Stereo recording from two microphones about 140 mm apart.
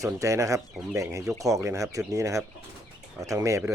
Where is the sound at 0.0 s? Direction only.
20° right (ahead or behind).